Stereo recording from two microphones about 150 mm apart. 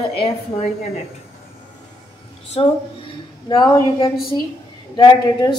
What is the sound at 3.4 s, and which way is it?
A woman's voice, 25° left (ahead or behind).